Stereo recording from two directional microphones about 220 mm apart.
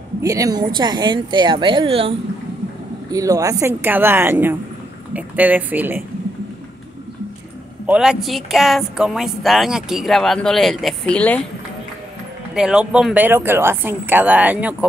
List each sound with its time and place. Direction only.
0.2 s speech: 15° right (ahead or behind)
7.8 s speech: 5° right (ahead or behind)
12.5 s speech: 5° right (ahead or behind)